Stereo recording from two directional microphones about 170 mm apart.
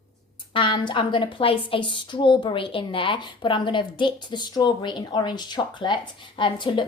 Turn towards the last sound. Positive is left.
turn(degrees=30)  # may be behind; listen again after turning